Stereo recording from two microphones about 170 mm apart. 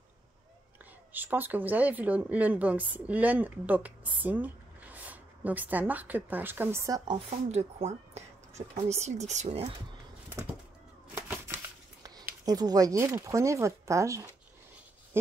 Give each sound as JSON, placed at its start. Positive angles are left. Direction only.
{"t": 1.1, "sound": "speech", "side_deg": -10}
{"t": 7.2, "sound": "speech", "side_deg": -40}
{"t": 11.1, "sound": "shuffling cards", "side_deg": -15}